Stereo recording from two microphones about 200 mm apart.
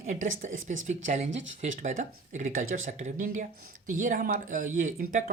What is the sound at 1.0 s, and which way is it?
Speech, 35° right (ahead or behind).